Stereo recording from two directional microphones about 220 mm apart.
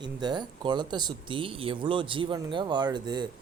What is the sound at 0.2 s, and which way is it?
Speech, 20° right (ahead or behind).